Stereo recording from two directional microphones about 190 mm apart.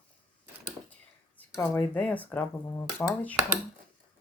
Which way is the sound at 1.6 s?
10° left (ahead or behind).